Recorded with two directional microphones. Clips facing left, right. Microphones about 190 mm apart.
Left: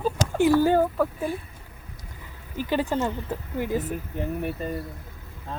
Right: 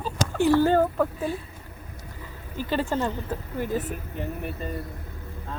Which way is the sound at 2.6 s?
15° left (ahead or behind).